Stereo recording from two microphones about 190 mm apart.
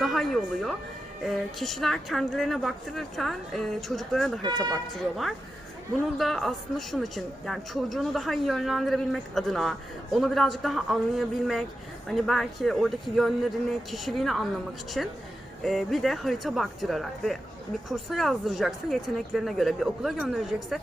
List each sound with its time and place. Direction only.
0.0 s a woman's voice: centre (ahead or behind)
4.4 s speech: 20° right (ahead or behind)
4.7 s a woman's voice: centre (ahead or behind)